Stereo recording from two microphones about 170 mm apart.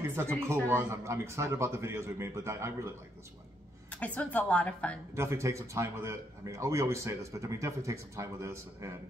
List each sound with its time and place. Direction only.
0.0 s a man's voice: 15° right (ahead or behind)
3.9 s a woman's voice: 10° left (ahead or behind)
5.1 s a man's voice: 15° right (ahead or behind)